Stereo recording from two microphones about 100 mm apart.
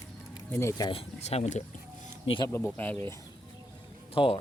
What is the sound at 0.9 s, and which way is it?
Speech, 75° left (ahead or behind).